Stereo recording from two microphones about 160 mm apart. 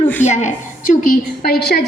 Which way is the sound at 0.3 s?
45° left (ahead or behind).